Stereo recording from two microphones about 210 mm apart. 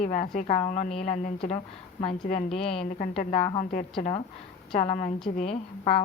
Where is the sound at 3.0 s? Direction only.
30° left (ahead or behind).